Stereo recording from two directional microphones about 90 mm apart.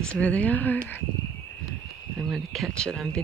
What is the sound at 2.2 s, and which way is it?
Speech, centre (ahead or behind).